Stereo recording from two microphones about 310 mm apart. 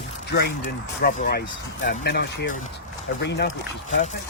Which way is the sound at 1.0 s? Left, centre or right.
Left.